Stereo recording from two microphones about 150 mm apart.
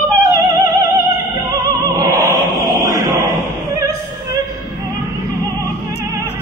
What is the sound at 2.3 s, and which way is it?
Choir, 20° right (ahead or behind).